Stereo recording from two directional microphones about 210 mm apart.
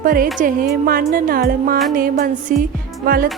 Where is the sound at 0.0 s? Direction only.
45° right (ahead or behind).